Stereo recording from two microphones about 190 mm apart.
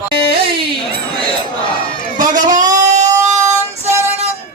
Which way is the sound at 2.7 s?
40° right (ahead or behind).